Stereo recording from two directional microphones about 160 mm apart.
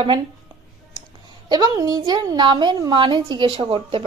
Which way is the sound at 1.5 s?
25° right (ahead or behind).